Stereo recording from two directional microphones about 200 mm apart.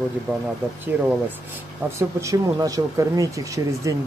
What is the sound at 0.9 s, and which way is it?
Speech, 10° right (ahead or behind).